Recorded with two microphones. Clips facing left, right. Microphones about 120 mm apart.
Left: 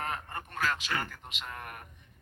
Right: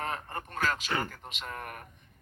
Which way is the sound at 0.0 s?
35° right (ahead or behind).